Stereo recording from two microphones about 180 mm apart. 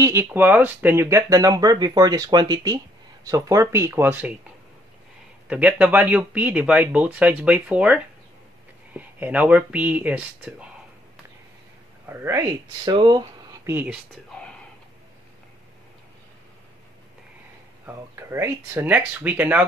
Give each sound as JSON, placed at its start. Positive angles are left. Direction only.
{"t": 0.0, "sound": "speech", "side_deg": -15}
{"t": 5.5, "sound": "speech", "side_deg": -10}
{"t": 12.1, "sound": "speech", "side_deg": -15}
{"t": 12.9, "sound": "speech", "side_deg": -25}
{"t": 14.3, "sound": "a sound", "side_deg": 5}
{"t": 17.8, "sound": "speech", "side_deg": -15}